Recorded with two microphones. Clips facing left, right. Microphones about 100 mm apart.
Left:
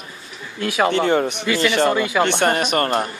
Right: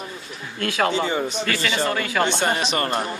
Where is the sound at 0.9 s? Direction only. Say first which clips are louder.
Left 5 dB; 60° left (ahead or behind).